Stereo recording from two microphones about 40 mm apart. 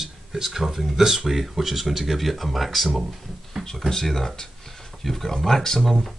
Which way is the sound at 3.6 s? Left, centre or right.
Centre.